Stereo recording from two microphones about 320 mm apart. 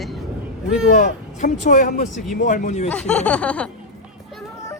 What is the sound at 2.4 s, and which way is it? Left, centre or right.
Speech, left.